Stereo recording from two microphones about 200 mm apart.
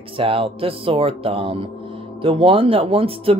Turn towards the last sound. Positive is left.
turn(degrees=-30)  # may be behind; listen again after turning